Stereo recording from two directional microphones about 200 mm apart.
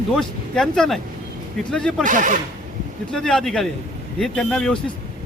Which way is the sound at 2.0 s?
40° right (ahead or behind).